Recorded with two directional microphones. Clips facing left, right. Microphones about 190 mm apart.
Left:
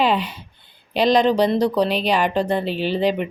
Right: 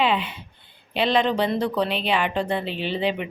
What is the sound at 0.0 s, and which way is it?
A woman's voice, 40° left (ahead or behind).